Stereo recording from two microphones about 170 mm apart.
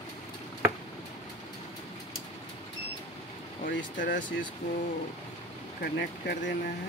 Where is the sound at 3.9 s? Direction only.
55° left (ahead or behind).